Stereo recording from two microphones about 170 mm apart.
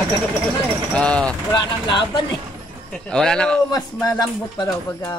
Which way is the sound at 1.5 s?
25° left (ahead or behind).